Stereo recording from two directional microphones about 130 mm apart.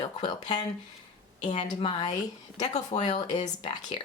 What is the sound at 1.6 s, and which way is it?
Speech, 35° left (ahead or behind).